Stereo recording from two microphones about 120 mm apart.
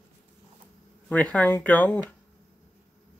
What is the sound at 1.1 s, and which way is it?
Speech, 10° left (ahead or behind).